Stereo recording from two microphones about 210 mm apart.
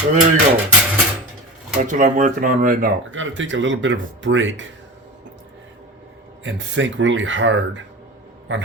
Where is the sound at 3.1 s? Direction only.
65° right (ahead or behind).